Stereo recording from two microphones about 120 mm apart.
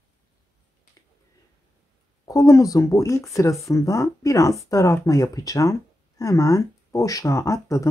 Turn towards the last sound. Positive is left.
turn(degrees=25)  # may be behind; listen again after turning